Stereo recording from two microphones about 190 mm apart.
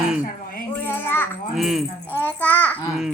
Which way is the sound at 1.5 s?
Centre (ahead or behind).